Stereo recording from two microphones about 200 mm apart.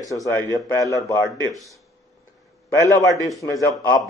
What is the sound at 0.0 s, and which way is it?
Speech, 15° left (ahead or behind).